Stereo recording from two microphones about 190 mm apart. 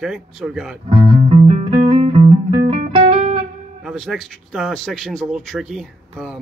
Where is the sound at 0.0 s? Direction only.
5° right (ahead or behind).